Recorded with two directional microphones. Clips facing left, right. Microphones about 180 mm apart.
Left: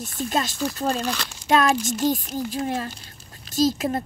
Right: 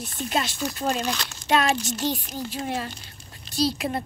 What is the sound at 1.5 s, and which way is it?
Speech, 45° left (ahead or behind).